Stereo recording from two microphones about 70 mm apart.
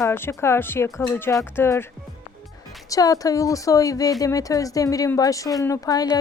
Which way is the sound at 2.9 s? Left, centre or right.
Left.